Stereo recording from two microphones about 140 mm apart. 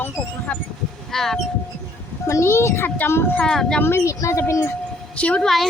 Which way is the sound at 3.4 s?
5° left (ahead or behind).